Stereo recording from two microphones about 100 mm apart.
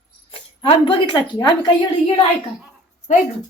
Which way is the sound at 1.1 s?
45° left (ahead or behind).